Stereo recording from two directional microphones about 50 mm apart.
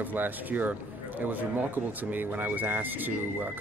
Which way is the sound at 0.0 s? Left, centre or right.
Right.